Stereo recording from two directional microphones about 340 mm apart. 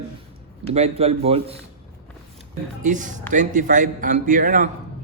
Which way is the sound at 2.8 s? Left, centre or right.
Right.